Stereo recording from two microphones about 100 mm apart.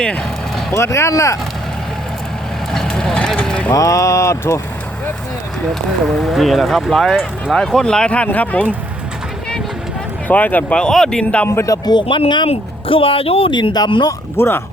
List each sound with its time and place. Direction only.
0.0 s speech: 10° left (ahead or behind)
0.7 s speech: 30° left (ahead or behind)
2.7 s vehicle: 5° left (ahead or behind)
3.7 s speech: 35° left (ahead or behind)
6.1 s speech: 5° left (ahead or behind)
10.2 s speech: 15° left (ahead or behind)
11.4 s speech: 30° left (ahead or behind)
11.9 s speech: 60° left (ahead or behind)
12.5 s speech: 65° left (ahead or behind)
13.5 s speech: 50° left (ahead or behind)
14.3 s speech: 25° left (ahead or behind)